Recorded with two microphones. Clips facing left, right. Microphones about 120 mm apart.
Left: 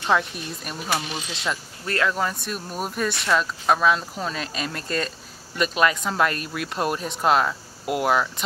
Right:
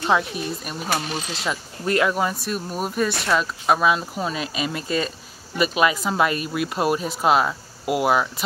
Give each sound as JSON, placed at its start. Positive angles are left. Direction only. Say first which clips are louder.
{"t": 0.0, "sound": "speech", "louder": "right 2 dB", "side_deg": -5}
{"t": 0.8, "sound": "speech", "louder": "right 2 dB", "side_deg": -40}
{"t": 1.9, "sound": "speech", "louder": "right 3 dB", "side_deg": -15}